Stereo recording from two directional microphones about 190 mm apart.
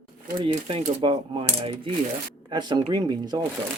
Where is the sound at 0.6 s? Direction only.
30° right (ahead or behind).